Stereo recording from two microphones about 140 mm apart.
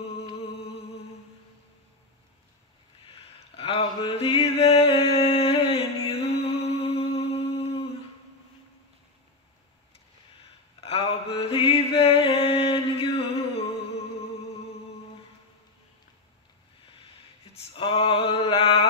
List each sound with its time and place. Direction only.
3.1 s a sound: 40° left (ahead or behind)
10.8 s mantra: 45° left (ahead or behind)
17.7 s male singing: 40° left (ahead or behind)